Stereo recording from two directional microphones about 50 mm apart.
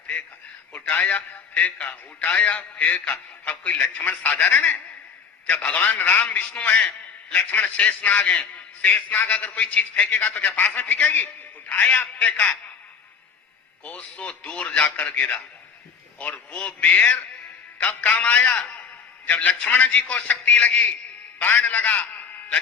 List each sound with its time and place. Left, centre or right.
0.9 s a man's voice: left
5.8 s a man's voice: left
6.2 s a man's voice: left
13.8 s a man's voice: left